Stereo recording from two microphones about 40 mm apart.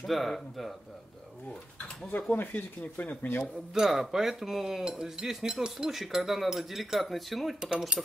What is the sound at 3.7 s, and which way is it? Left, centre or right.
Speech, centre.